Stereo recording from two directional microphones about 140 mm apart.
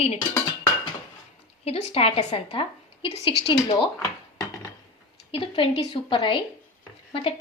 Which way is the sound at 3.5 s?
30° left (ahead or behind).